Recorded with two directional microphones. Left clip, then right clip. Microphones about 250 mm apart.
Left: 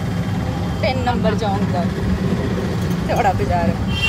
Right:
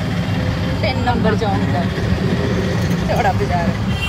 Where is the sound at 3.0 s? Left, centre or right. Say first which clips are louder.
Even; centre.